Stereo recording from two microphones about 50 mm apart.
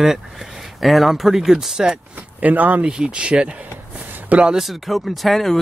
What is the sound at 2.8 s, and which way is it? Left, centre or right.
Speech, centre.